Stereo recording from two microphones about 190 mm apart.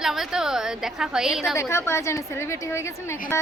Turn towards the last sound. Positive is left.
turn(degrees=15)  # may be behind; listen again after turning